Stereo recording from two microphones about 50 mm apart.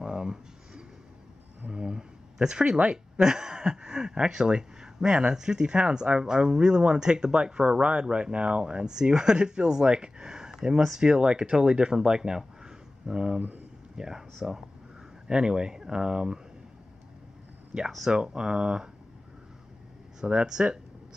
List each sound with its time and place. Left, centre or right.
0.0 s a sound: centre
1.7 s speech: centre
17.9 s speech: centre
20.2 s speech: centre